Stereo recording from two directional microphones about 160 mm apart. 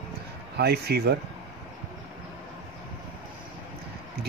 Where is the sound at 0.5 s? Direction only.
85° right.